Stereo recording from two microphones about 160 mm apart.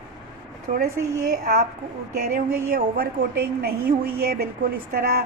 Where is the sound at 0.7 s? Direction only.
65° right (ahead or behind).